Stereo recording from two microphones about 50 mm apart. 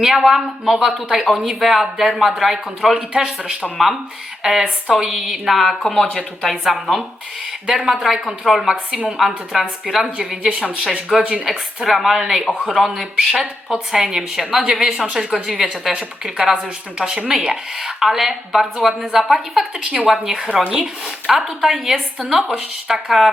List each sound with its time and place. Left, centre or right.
0.0 s a woman's voice: centre
10.2 s speech: centre
10.8 s a woman's voice: centre
11.2 s a woman's voice: centre
11.4 s a woman's voice: centre
16.4 s a woman's voice: centre